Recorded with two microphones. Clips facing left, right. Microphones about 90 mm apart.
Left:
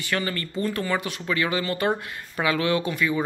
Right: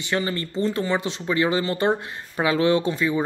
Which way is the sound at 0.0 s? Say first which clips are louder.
Right 2 dB; 20° right (ahead or behind).